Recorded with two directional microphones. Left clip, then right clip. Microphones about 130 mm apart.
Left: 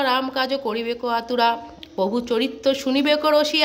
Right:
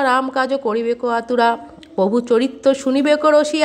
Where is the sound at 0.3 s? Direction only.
35° right (ahead or behind).